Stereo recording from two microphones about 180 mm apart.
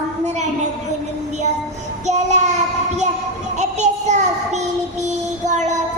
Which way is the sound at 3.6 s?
40° right (ahead or behind).